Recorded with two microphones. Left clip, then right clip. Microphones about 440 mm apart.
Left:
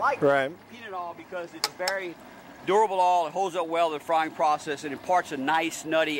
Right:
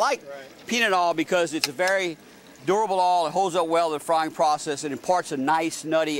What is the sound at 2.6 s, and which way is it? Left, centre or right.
Speech, right.